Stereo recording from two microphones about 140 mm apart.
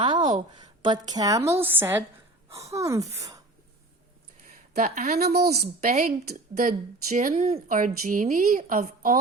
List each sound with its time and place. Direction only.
0.0 s a woman's voice: 35° right (ahead or behind)
1.5 s a woman's voice: 15° right (ahead or behind)
4.7 s a woman's voice: 70° right (ahead or behind)
7.3 s speech: 50° right (ahead or behind)
7.7 s a woman's voice: 70° right (ahead or behind)